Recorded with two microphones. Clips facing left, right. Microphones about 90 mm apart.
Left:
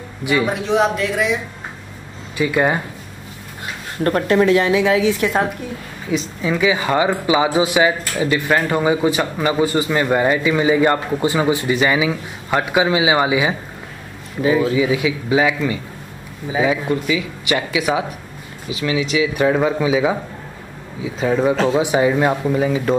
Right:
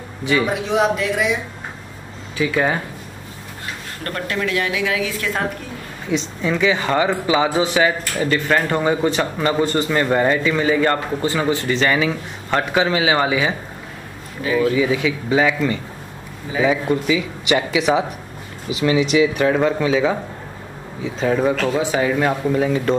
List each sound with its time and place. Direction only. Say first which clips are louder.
0.2 s speech: even; 10° left (ahead or behind)
0.5 s speech: left 1 dB; centre (ahead or behind)
2.3 s speech: left 2 dB; 10° left (ahead or behind)
4.0 s a woman's voice: left 9 dB; 30° left (ahead or behind)
6.0 s speech: even; 5° left (ahead or behind)
14.4 s speech: left 2 dB; 20° left (ahead or behind); by 18.0 s centre (ahead or behind)
18.9 s speech: right 3 dB; 30° right (ahead or behind)
19.3 s speech: left 1 dB; 5° left (ahead or behind)
21.5 s speech: left 3 dB; 20° left (ahead or behind); by 22.9 s 5° left (ahead or behind)